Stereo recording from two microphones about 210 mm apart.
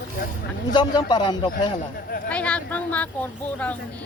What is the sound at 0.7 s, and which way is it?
A man's voice, 20° left (ahead or behind).